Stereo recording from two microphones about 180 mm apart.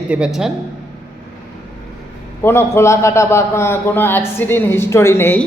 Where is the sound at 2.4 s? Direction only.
15° left (ahead or behind).